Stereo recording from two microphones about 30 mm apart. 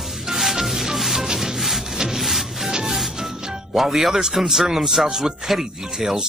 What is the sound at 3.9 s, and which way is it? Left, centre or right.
A man's voice, centre.